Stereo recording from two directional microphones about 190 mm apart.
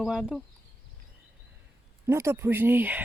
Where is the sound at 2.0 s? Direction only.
15° right (ahead or behind).